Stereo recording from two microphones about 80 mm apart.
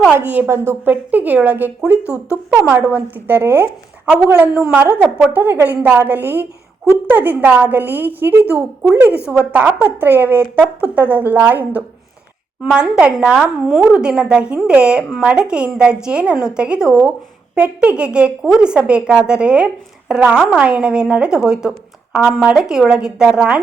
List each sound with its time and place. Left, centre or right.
0.1 s a woman's voice: right
2.7 s a woman's voice: right; by 23.6 s centre